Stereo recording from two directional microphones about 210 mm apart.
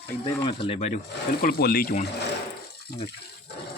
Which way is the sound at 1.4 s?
45° left (ahead or behind).